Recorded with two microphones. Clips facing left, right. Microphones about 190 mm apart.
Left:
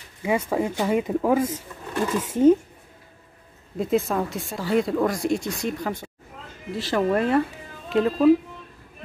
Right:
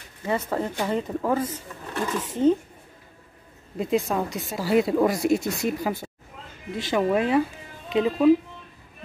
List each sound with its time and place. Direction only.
0.2 s speech: 10° left (ahead or behind)
3.7 s speech: centre (ahead or behind)